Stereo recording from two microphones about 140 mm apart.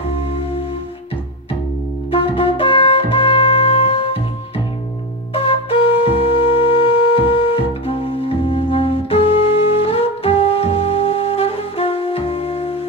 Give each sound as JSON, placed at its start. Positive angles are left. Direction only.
{"t": 2.0, "sound": "music", "side_deg": 40}
{"t": 5.3, "sound": "flute", "side_deg": 40}